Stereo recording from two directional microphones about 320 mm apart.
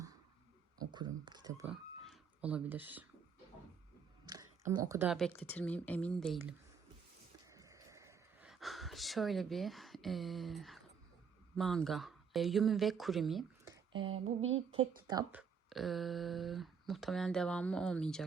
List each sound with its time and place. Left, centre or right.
0.8 s speech: centre
4.3 s speech: centre
7.4 s a sound: centre
11.5 s speech: centre
14.1 s a sound: right
15.0 s speech: centre